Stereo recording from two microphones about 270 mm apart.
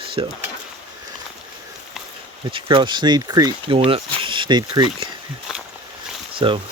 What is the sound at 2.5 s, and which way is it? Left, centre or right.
Speech, centre.